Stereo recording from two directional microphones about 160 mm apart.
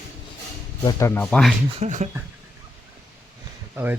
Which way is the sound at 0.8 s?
20° left (ahead or behind).